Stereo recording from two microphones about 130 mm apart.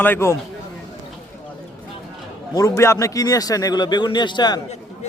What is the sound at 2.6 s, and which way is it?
Speech, 25° left (ahead or behind).